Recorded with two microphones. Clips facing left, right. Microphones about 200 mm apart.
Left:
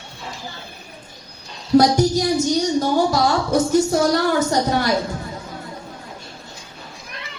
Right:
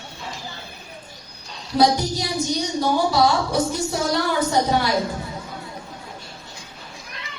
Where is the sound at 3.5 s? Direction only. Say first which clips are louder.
Left 6 dB; 45° left (ahead or behind).